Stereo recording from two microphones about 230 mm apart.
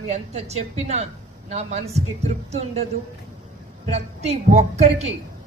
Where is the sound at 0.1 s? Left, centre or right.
Right.